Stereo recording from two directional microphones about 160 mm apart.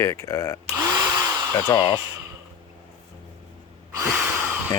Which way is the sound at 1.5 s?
30° left (ahead or behind).